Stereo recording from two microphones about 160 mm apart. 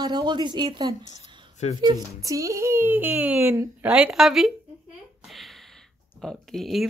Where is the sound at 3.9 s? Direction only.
5° right (ahead or behind).